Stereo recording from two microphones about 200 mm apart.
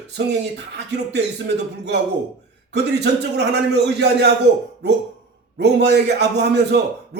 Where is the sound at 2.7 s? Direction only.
55° right (ahead or behind).